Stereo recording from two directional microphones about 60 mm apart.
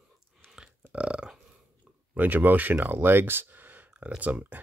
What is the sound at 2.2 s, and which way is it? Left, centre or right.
Speech, right.